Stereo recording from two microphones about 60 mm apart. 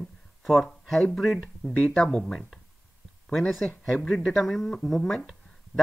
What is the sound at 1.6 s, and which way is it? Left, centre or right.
Speech, centre.